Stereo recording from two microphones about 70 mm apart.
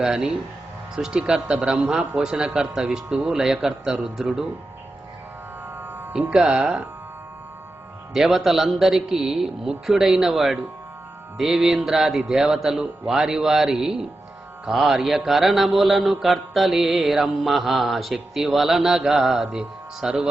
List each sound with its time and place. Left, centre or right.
0.0 s a man's voice: centre
5.8 s music: right
6.1 s a man's voice: centre
8.1 s a man's voice: centre
14.6 s mantra: centre
19.2 s a man's voice: centre